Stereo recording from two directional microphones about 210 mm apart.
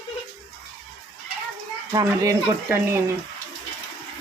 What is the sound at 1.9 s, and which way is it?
Speech, 15° right (ahead or behind).